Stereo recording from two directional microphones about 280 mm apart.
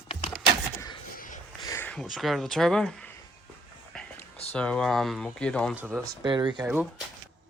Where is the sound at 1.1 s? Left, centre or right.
Left.